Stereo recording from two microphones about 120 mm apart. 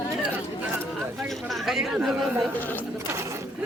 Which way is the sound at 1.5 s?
5° right (ahead or behind).